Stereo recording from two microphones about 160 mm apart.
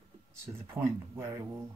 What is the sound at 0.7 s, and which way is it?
Speech, 15° right (ahead or behind).